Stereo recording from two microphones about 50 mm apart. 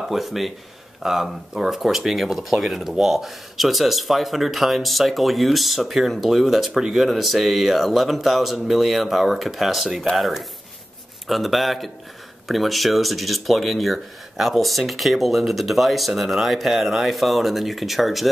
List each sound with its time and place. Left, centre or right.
0.1 s speech: centre